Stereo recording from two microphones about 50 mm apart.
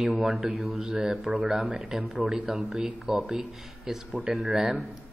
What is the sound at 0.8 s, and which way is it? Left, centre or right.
Speech, centre.